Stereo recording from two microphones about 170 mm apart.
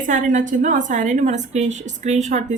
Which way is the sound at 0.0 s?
50° right (ahead or behind).